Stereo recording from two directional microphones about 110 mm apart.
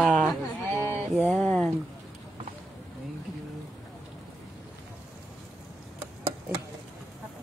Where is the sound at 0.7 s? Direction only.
25° left (ahead or behind).